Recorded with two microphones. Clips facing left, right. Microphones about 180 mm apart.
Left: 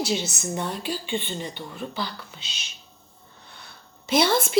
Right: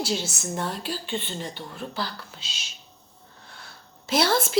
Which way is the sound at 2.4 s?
60° left (ahead or behind).